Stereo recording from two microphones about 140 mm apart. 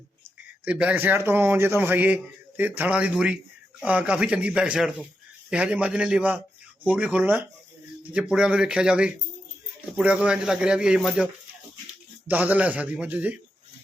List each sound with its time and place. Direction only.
0.6 s a man's voice: 10° right (ahead or behind)
12.3 s a man's voice: 10° right (ahead or behind)